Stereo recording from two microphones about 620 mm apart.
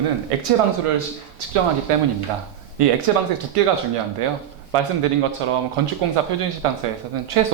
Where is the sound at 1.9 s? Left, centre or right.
Right.